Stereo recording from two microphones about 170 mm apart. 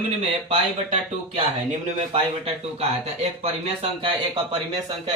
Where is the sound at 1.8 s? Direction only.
40° right (ahead or behind).